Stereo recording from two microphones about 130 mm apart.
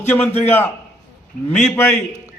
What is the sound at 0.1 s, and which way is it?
Speech, 15° left (ahead or behind).